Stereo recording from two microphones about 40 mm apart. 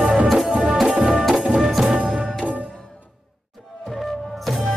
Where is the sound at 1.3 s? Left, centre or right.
Centre.